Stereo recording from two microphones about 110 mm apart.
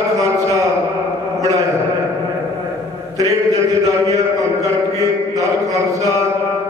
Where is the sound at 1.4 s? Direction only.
30° right (ahead or behind).